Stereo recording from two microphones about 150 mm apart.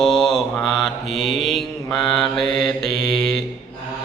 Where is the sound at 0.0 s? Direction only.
Centre (ahead or behind).